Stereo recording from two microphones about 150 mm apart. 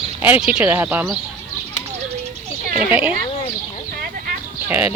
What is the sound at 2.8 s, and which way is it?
Speech, 10° right (ahead or behind).